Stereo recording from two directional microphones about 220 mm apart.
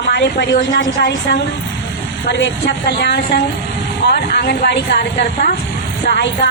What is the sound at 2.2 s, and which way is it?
A woman's voice, 55° left (ahead or behind).